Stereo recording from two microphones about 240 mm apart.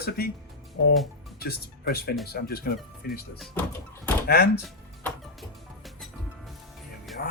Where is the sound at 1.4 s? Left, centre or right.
Left.